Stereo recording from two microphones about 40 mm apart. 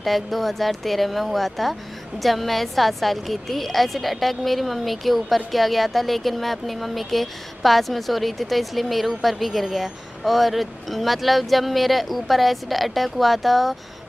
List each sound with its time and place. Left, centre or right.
0.0 s a woman's voice: centre